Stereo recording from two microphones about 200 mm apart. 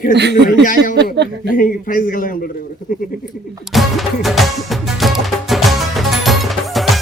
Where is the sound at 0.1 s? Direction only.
60° right (ahead or behind).